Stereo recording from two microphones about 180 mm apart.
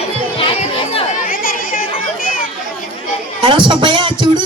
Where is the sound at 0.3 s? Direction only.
30° left (ahead or behind).